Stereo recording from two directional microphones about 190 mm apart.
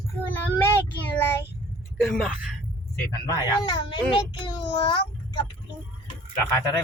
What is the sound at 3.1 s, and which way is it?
Speech, 20° left (ahead or behind).